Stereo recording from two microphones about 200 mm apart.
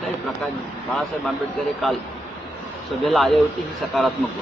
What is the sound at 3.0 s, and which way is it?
Speech, centre (ahead or behind).